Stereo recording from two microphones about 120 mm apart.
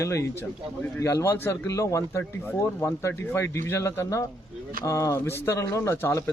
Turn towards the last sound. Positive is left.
turn(degrees=20)  # may be behind; listen again after turning